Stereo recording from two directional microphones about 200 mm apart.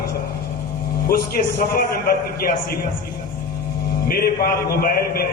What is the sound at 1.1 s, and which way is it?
A man's voice, 45° left (ahead or behind).